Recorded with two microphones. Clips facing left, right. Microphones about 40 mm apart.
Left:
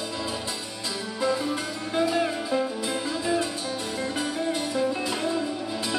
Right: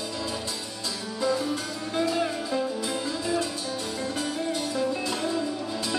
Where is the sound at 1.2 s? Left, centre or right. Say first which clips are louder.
Even; centre.